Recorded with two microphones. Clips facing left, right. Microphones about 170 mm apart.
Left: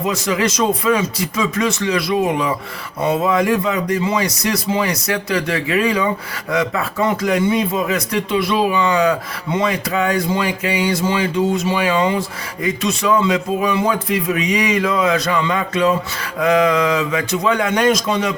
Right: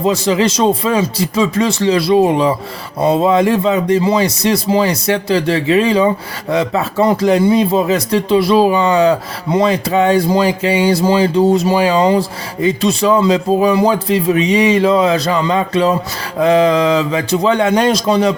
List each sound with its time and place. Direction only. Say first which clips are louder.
0.0 s speech: right 5 dB; 30° right (ahead or behind)